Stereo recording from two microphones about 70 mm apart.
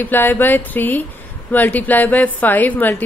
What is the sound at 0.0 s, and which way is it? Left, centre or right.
A woman's voice, left.